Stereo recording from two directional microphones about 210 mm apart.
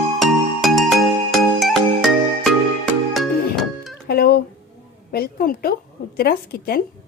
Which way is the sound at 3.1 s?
Centre (ahead or behind).